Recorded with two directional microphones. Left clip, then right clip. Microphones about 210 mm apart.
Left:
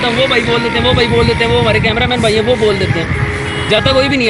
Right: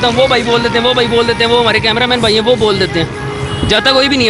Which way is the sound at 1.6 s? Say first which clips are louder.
Right 1 dB; 45° right (ahead or behind).